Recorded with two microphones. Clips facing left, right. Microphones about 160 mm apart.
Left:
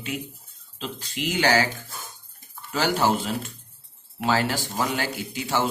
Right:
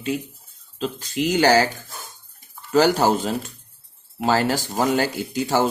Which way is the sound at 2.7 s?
40° right (ahead or behind).